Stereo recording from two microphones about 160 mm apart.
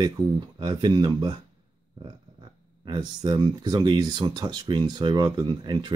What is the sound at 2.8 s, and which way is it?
Speech, 25° right (ahead or behind).